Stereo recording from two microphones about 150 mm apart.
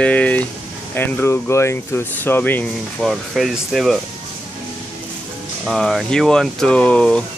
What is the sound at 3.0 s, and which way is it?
Speech, centre (ahead or behind).